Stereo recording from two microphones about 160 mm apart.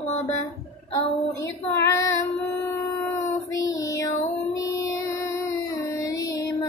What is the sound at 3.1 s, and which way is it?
Child singing, 20° left (ahead or behind).